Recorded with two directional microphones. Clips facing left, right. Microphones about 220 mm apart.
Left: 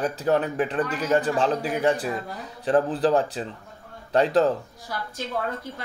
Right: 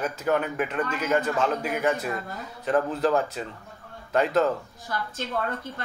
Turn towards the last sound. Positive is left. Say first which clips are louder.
# even
turn(degrees=10)  # may be behind; listen again after turning